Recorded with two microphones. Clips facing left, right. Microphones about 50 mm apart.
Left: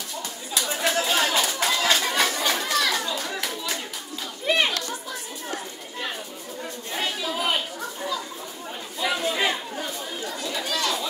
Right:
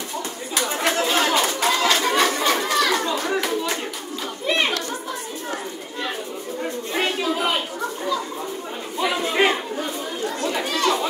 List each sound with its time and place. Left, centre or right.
0.6 s chatter: right
2.9 s children playing: right
6.6 s a sound: right
9.0 s chatter: right
9.3 s chatter: right